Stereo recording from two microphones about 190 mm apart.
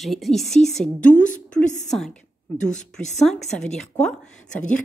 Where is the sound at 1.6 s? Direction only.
40° left (ahead or behind).